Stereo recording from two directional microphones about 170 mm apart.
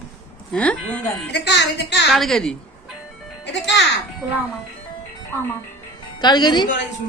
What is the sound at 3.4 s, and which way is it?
Speech, 90° left.